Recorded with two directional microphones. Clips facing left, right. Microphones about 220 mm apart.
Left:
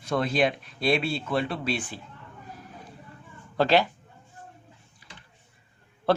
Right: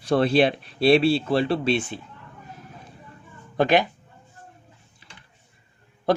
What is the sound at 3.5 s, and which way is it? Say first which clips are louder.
Speech: right 2 dB; 15° right (ahead or behind).